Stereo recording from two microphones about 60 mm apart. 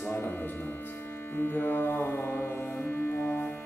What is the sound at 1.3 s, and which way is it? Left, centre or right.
Music, left.